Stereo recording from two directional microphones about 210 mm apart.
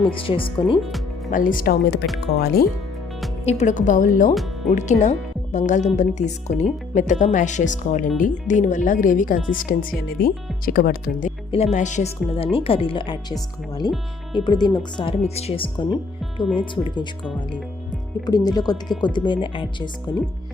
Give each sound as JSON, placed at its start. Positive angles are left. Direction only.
{"t": 0.0, "sound": "speech", "side_deg": 25}
{"t": 1.3, "sound": "speech", "side_deg": 40}
{"t": 3.4, "sound": "speech", "side_deg": 35}
{"t": 18.3, "sound": "speech", "side_deg": 20}